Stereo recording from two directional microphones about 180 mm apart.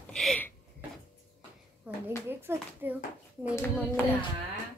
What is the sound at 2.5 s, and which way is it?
Speech, 10° right (ahead or behind).